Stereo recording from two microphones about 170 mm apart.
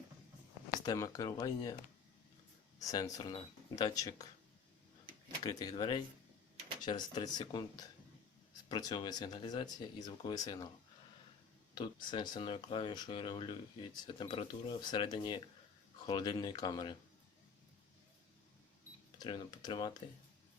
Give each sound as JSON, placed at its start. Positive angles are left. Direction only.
{"t": 0.9, "sound": "speech", "side_deg": 20}
{"t": 2.8, "sound": "speech", "side_deg": 20}
{"t": 5.4, "sound": "speech", "side_deg": 20}
{"t": 11.7, "sound": "speech", "side_deg": 25}
{"t": 19.2, "sound": "speech", "side_deg": 25}